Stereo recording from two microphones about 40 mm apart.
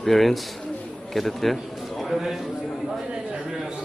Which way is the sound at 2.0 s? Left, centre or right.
Centre.